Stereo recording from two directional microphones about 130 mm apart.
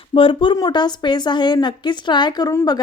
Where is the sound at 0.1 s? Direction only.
40° left (ahead or behind).